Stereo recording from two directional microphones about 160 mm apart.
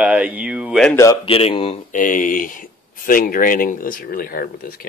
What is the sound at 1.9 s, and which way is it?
Speech, 55° left (ahead or behind).